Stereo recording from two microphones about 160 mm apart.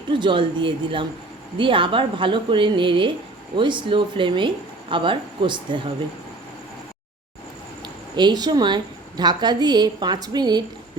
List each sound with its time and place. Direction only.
0.1 s speech: 30° right (ahead or behind)
7.8 s a woman's voice: 30° right (ahead or behind)